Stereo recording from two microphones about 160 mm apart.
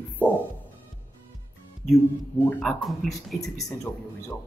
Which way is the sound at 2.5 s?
5° left (ahead or behind).